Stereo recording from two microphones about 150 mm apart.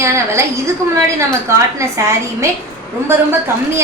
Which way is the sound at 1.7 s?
20° right (ahead or behind).